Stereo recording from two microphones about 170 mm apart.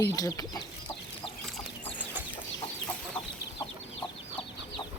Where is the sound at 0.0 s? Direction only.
20° left (ahead or behind).